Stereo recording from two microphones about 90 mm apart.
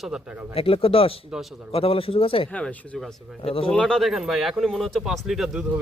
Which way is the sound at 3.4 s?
90° left.